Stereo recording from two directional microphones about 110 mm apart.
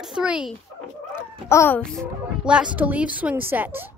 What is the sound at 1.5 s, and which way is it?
Speech, 25° left (ahead or behind).